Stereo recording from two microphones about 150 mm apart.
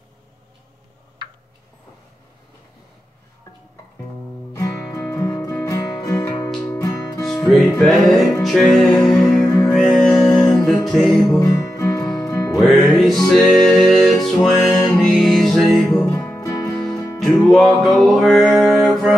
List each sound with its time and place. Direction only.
4.6 s music: 20° left (ahead or behind)
7.2 s music: centre (ahead or behind)
11.3 s music: 20° left (ahead or behind)
12.6 s music: centre (ahead or behind)
16.1 s music: 15° left (ahead or behind)
16.7 s music: 5° left (ahead or behind)